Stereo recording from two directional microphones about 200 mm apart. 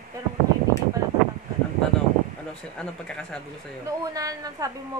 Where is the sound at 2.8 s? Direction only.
5° left (ahead or behind).